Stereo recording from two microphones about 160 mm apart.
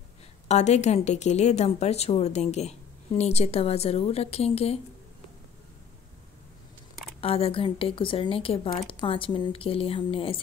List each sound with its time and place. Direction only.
0.5 s a woman's voice: 45° left (ahead or behind)
7.2 s speech: 35° left (ahead or behind)